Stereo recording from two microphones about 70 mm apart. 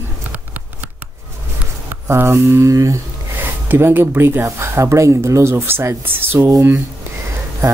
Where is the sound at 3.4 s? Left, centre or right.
Right.